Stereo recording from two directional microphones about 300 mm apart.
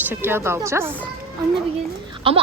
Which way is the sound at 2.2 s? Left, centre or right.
Centre.